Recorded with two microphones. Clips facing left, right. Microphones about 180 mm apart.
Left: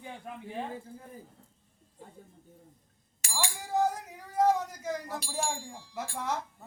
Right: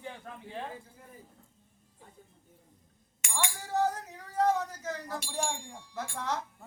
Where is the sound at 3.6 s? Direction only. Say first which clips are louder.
Left 2 dB; 10° left (ahead or behind).